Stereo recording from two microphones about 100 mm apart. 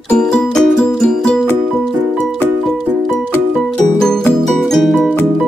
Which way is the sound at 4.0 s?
5° left (ahead or behind).